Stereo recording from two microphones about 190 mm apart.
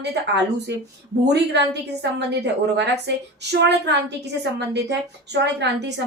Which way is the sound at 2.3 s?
65° right (ahead or behind).